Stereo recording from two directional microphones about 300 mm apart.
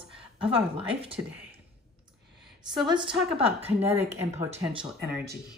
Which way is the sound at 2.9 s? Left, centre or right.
Centre.